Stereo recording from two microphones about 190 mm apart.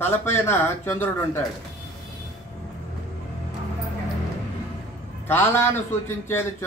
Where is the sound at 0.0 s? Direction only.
10° left (ahead or behind).